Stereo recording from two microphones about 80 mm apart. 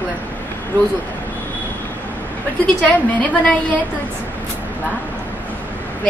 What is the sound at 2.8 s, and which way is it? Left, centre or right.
Speech, centre.